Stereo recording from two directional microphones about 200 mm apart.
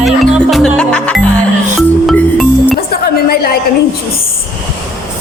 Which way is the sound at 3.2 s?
50° left (ahead or behind).